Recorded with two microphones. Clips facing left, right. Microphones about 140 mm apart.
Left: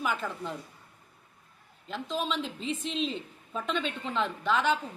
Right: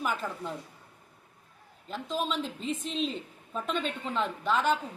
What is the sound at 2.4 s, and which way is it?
Speech, 45° right (ahead or behind).